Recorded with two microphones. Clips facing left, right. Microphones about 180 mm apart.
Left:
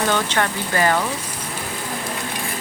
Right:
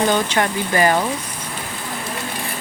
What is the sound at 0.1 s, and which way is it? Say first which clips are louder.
Speech: right 2 dB; 15° right (ahead or behind).